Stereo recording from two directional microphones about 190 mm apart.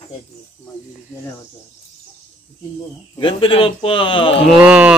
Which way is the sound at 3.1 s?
30° left (ahead or behind).